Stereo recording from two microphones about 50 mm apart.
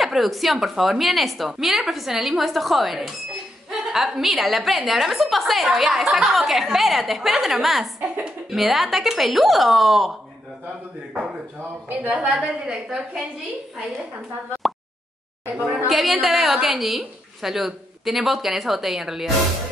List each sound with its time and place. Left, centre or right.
0.0 s a woman's voice: centre
11.9 s a woman's voice: right
12.4 s a woman's voice: centre
15.5 s a woman's voice: right
15.9 s a woman's voice: centre